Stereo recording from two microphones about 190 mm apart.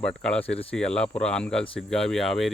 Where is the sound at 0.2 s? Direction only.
5° left (ahead or behind).